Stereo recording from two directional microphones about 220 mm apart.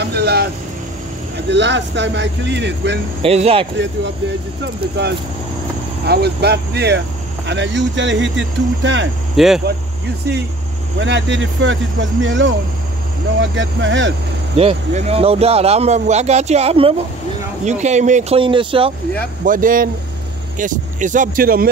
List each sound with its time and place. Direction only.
0.0 s vehicle: 45° right (ahead or behind)
1.5 s speech: 55° right (ahead or behind)
3.2 s speech: 25° right (ahead or behind)
6.0 s speech: 50° right (ahead or behind)
9.4 s speech: centre (ahead or behind)
11.0 s speech: 55° right (ahead or behind)
14.6 s speech: 25° right (ahead or behind)
19.4 s speech: 40° right (ahead or behind)